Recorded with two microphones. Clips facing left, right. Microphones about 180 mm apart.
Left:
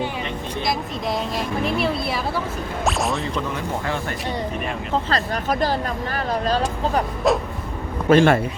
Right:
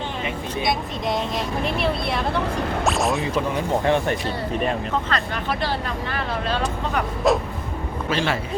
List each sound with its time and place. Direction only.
0.6 s a woman's voice: centre (ahead or behind)
3.5 s speech: 20° right (ahead or behind)
5.0 s speech: 40° left (ahead or behind)
7.3 s a woman's voice: centre (ahead or behind)
8.1 s a man's voice: 50° left (ahead or behind)